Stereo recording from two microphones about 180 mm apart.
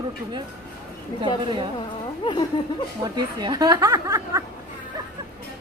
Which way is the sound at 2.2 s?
25° left (ahead or behind).